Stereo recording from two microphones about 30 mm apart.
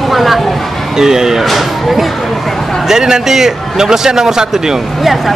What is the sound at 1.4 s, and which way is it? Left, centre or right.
Speech, centre.